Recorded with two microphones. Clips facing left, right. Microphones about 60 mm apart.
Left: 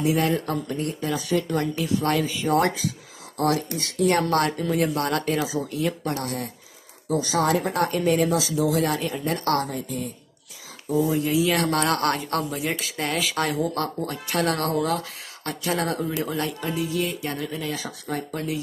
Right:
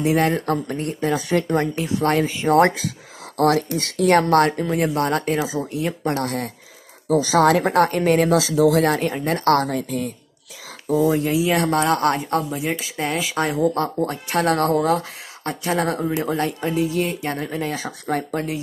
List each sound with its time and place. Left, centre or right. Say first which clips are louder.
0.0 s speech: right 3 dB; right
6.2 s speech: right 5 dB; right
7.2 s speech: right 6 dB; right
8.4 s speech: right 6 dB; right
9.7 s speech: right 6 dB; right
11.1 s speech: right 3 dB; right
11.4 s speech: right 3 dB; centre
13.6 s speech: right 6 dB; right